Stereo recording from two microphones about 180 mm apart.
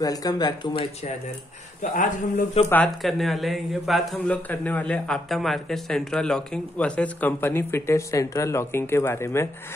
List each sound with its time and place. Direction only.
0.0 s speech: 20° left (ahead or behind)
1.8 s speech: 45° left (ahead or behind)
2.7 s a man's voice: 5° left (ahead or behind)